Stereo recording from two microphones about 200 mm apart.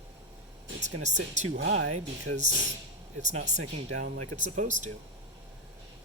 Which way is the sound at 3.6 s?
90° right.